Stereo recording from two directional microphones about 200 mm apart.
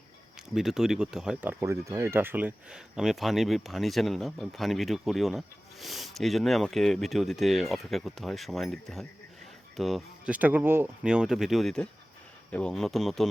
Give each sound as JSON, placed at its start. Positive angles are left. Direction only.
{"t": 0.5, "sound": "speech", "side_deg": 0}